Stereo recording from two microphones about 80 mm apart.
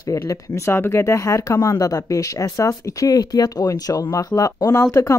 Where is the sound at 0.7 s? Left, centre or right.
Left.